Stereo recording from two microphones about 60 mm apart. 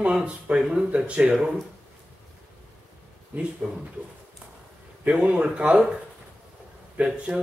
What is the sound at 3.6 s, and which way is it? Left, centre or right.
Speech, centre.